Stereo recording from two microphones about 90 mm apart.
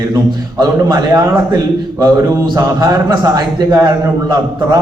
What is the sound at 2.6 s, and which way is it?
A man's voice, 45° right (ahead or behind).